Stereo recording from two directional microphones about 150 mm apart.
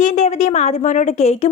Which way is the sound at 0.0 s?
50° left (ahead or behind).